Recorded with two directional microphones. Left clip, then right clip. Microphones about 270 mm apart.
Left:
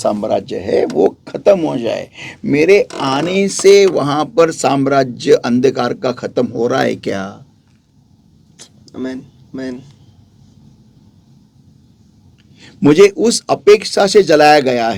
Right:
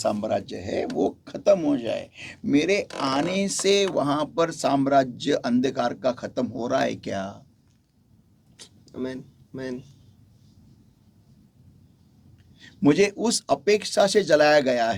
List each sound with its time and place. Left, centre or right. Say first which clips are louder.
0.0 s speech: left 9 dB; left
8.5 s a sound: left 7 dB; right
12.5 s speech: left 11 dB; left